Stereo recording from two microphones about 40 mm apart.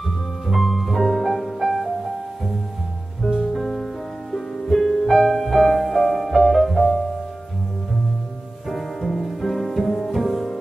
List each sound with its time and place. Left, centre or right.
0.5 s music: centre
3.5 s music: centre
8.6 s music: centre